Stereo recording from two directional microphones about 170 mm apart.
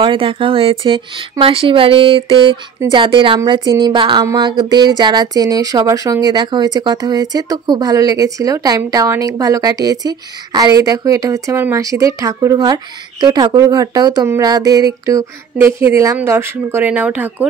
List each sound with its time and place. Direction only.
0.0 s speech: 30° right (ahead or behind); by 17.5 s 10° right (ahead or behind)